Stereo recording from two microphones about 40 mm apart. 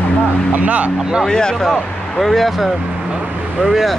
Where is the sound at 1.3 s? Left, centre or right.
Centre.